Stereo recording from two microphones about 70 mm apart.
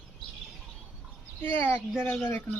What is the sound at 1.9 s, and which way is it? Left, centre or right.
Speech, centre.